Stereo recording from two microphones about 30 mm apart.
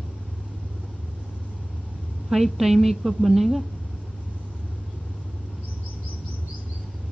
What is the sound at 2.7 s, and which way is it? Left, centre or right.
Speech, centre.